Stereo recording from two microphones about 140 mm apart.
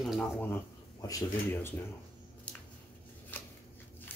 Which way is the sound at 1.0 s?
20° left (ahead or behind).